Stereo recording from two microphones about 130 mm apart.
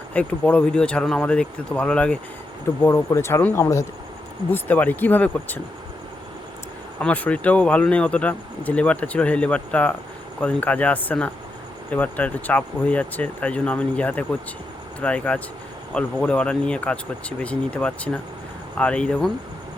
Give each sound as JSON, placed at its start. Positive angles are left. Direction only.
{"t": 0.1, "sound": "speech", "side_deg": 10}
{"t": 2.8, "sound": "speech", "side_deg": 20}
{"t": 7.0, "sound": "speech", "side_deg": 10}